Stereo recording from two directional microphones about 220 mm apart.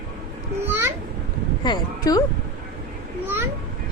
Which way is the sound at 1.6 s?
20° left (ahead or behind).